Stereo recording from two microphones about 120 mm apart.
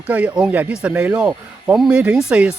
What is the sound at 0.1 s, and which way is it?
Speech, 10° right (ahead or behind).